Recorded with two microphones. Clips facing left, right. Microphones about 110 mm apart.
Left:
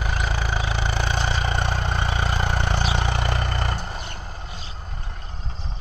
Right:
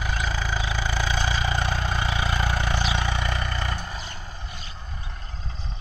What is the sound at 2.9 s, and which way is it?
Vehicle, 60° left (ahead or behind).